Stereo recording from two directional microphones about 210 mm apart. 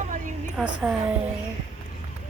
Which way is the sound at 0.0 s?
35° right (ahead or behind).